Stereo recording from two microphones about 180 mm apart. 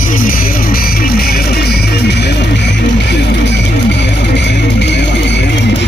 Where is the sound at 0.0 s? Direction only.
50° left (ahead or behind); by 5.4 s 75° left (ahead or behind).